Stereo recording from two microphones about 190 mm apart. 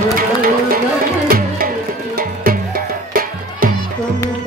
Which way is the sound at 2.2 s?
50° right (ahead or behind).